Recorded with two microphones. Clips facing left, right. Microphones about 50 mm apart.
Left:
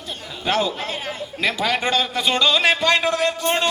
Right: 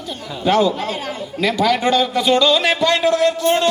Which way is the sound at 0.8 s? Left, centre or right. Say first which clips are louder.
Right 4 dB; left.